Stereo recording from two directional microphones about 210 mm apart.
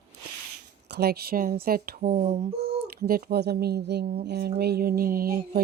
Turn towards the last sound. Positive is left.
turn(degrees=-45)  # may be behind; listen again after turning